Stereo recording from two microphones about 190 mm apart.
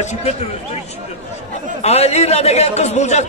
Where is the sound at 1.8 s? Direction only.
35° left (ahead or behind).